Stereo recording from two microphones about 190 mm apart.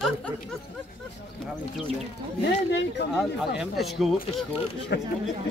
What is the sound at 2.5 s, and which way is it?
Speech, 65° left (ahead or behind).